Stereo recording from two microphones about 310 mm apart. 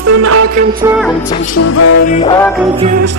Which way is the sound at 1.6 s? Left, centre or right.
Left.